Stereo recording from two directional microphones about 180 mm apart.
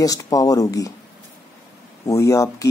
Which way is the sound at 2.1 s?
15° left (ahead or behind).